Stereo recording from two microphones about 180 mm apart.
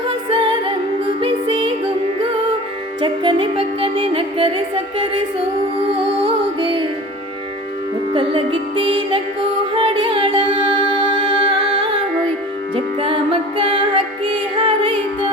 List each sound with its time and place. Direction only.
0.1 s music: 30° right (ahead or behind)
3.0 s music: 25° right (ahead or behind)
6.2 s music: 30° right (ahead or behind)
8.1 s music: 30° right (ahead or behind)